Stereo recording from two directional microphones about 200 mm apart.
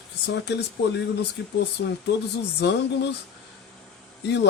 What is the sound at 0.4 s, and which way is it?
Speech, 60° left (ahead or behind).